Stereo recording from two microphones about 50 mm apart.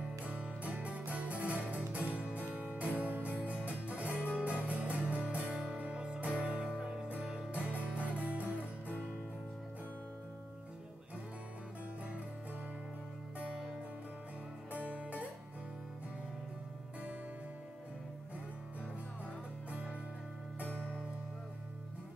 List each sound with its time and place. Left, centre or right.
0.2 s music: right
7.7 s music: right
13.4 s music: right
14.7 s music: right
20.5 s music: right